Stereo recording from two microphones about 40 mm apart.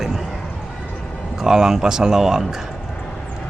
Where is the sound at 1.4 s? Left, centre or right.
Centre.